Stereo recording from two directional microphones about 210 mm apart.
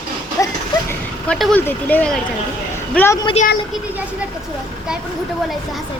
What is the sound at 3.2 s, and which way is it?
Speech, 30° left (ahead or behind).